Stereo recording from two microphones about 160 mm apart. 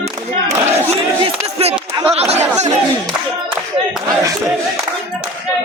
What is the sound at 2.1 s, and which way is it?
Chatter, 40° right (ahead or behind).